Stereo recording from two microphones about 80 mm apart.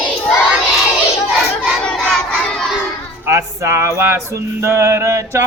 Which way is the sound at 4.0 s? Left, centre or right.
Right.